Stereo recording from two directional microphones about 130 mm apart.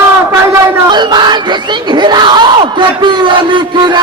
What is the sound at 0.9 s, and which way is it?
Crowd, 35° right (ahead or behind).